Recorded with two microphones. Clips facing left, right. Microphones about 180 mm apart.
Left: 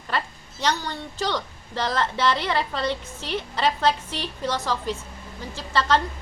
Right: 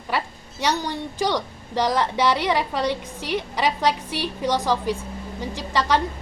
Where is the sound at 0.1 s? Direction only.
10° right (ahead or behind).